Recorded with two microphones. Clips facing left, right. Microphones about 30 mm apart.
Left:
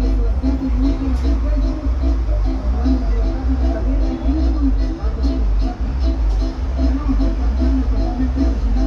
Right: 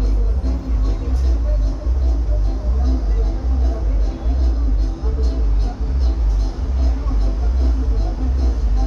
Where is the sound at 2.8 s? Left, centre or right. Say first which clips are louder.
Left 9 dB; left.